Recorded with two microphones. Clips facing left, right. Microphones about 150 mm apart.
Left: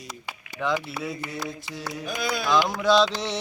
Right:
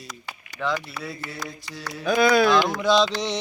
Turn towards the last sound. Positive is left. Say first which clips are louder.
# even
turn(degrees=5)  # may be behind; listen again after turning